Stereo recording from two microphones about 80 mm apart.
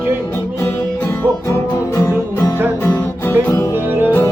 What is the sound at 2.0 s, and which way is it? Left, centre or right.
Music, left.